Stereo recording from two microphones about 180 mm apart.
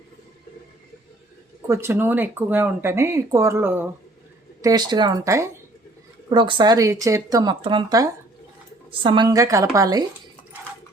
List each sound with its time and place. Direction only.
1.6 s speech: 15° right (ahead or behind)